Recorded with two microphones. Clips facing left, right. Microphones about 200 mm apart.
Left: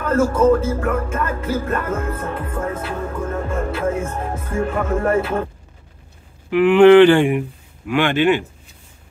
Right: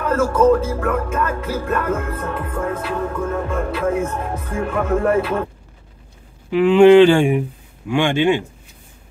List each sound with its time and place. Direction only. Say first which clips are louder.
0.5 s music: even; 65° right (ahead or behind)
6.5 s speech: even; 10° right (ahead or behind)